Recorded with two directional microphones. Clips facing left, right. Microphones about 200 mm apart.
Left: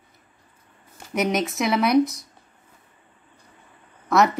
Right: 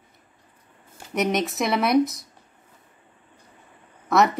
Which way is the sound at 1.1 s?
Centre (ahead or behind).